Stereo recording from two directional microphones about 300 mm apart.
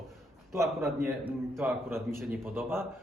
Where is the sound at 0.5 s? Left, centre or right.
Centre.